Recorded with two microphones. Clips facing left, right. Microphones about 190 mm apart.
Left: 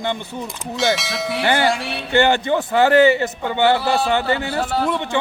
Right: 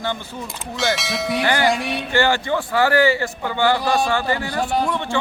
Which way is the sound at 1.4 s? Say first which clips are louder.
Left 2 dB; 25° left (ahead or behind).